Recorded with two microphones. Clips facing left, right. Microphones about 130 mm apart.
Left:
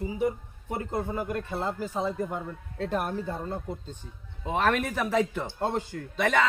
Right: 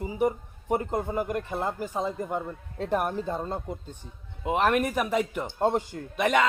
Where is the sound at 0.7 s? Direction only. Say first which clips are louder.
Right 4 dB; 15° right (ahead or behind).